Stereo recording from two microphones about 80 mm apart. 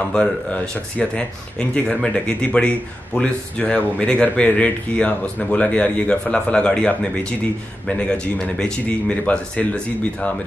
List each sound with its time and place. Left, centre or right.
0.0 s speech: centre